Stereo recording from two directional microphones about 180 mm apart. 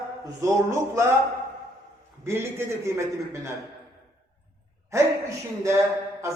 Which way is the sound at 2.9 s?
15° right (ahead or behind).